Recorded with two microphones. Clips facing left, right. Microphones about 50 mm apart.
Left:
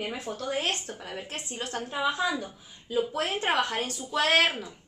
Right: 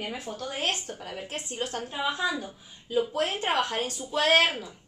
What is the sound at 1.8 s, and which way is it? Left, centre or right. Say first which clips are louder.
Speech: left 3 dB; centre.